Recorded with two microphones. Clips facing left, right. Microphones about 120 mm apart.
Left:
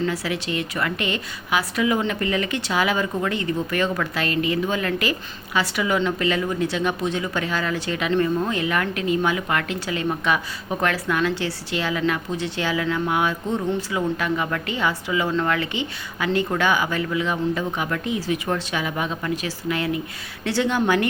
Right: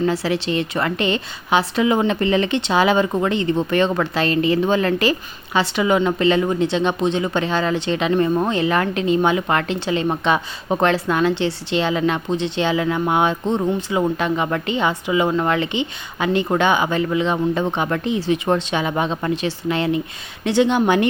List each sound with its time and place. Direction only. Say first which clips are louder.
0.0 s a woman's voice: right 5 dB; 30° right (ahead or behind)